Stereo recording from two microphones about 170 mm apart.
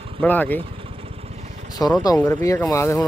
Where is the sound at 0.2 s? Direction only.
10° left (ahead or behind).